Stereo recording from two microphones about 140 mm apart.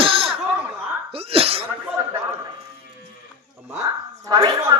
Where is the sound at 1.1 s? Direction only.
45° right (ahead or behind).